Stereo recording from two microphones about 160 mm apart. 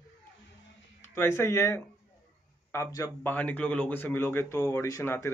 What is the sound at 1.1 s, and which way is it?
Speech, 15° left (ahead or behind).